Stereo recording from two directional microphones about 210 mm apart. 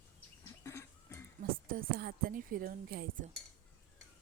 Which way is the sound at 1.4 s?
45° right (ahead or behind).